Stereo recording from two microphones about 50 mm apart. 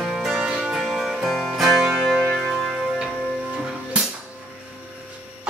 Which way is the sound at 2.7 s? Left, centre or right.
Centre.